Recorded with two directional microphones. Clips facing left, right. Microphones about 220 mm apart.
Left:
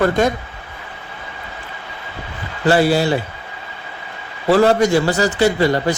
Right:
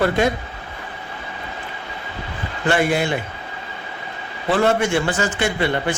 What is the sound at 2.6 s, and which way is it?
Speech, 35° left (ahead or behind).